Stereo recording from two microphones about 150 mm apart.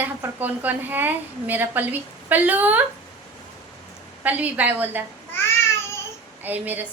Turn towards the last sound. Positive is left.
turn(degrees=-10)  # may be behind; listen again after turning